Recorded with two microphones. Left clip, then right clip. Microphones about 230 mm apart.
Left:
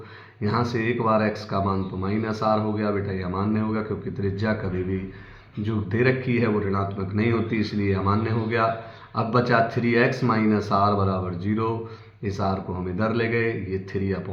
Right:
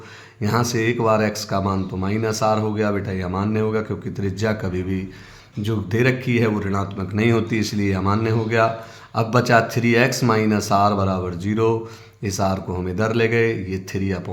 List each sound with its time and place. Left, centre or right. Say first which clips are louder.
0.4 s a man's voice: right 4 dB; right